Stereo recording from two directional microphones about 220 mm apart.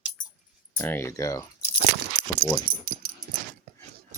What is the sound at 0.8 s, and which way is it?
Speech, 10° left (ahead or behind).